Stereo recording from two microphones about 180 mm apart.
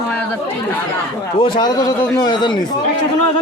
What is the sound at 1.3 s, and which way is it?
A man's voice, 30° left (ahead or behind).